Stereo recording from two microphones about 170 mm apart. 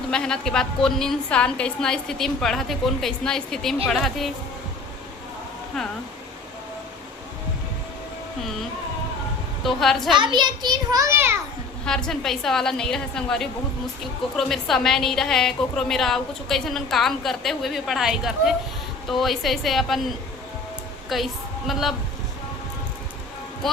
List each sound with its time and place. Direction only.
0.1 s a woman's voice: 5° left (ahead or behind)
9.6 s a woman's voice: centre (ahead or behind)
10.2 s a child's voice: 25° right (ahead or behind)
11.9 s a woman's voice: 5° left (ahead or behind)
21.1 s a woman's voice: centre (ahead or behind)